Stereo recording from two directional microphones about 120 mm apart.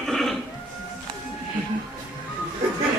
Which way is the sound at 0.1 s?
5° left (ahead or behind).